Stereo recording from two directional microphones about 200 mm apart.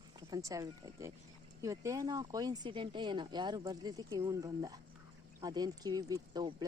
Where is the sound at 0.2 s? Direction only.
20° right (ahead or behind).